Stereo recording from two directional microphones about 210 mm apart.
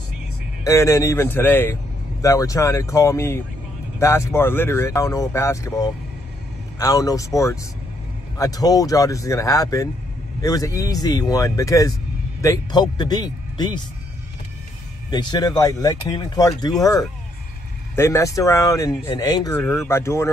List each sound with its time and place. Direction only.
0.7 s speech: 15° left (ahead or behind)
15.0 s speech: 20° left (ahead or behind)
17.9 s speech: 15° left (ahead or behind)
19.6 s speech: centre (ahead or behind)
19.9 s speech: 10° left (ahead or behind)